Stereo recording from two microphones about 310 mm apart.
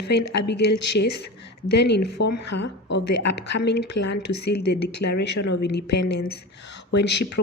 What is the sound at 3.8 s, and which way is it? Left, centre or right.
Speech, left.